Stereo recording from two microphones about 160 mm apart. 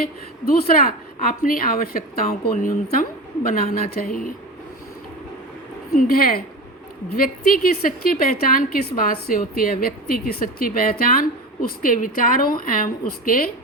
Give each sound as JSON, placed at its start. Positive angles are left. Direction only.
{"t": 0.0, "sound": "a woman's voice", "side_deg": 70}
{"t": 6.0, "sound": "a woman's voice", "side_deg": 65}